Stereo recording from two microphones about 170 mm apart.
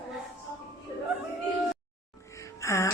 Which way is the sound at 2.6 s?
20° left (ahead or behind).